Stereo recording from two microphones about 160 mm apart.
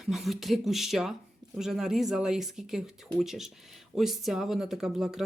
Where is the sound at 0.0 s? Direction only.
Centre (ahead or behind).